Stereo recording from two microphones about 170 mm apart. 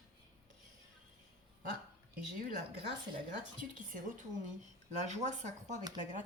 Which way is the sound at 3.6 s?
50° right (ahead or behind).